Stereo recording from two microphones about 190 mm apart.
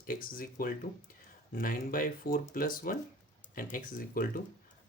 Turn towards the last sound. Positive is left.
turn(degrees=45)  # may be behind; listen again after turning